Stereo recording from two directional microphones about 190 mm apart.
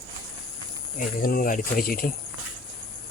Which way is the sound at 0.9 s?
50° left (ahead or behind).